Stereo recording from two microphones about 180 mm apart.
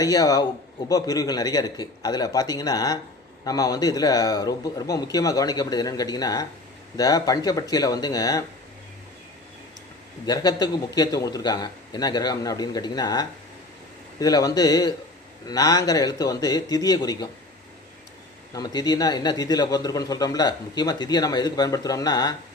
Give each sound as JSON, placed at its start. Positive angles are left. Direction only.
{"t": 0.0, "sound": "a man's voice", "side_deg": 20}
{"t": 10.2, "sound": "a man's voice", "side_deg": 20}
{"t": 18.5, "sound": "a man's voice", "side_deg": 20}